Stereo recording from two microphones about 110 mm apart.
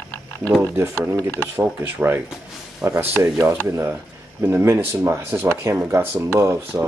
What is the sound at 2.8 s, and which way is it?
Speech, 30° right (ahead or behind).